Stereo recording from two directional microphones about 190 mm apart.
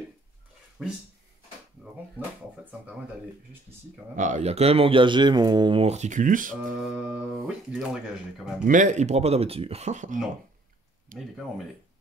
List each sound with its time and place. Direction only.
0.8 s speech: centre (ahead or behind)
4.1 s speech: 40° right (ahead or behind)
7.0 s speech: 5° right (ahead or behind)
8.6 s speech: 40° right (ahead or behind)
11.1 s speech: centre (ahead or behind)